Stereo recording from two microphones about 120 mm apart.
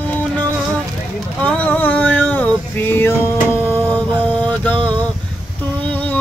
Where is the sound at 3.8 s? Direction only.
10° left (ahead or behind).